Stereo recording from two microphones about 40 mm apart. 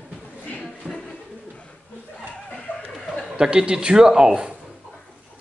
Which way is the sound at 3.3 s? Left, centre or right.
Right.